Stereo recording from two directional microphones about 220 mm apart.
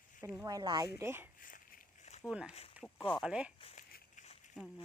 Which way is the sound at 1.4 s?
40° left (ahead or behind).